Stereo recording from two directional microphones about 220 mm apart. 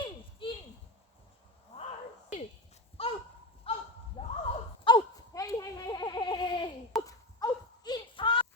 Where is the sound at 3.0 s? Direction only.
25° left (ahead or behind).